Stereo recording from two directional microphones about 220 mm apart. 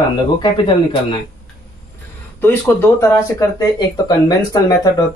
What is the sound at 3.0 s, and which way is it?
Speech, 15° left (ahead or behind).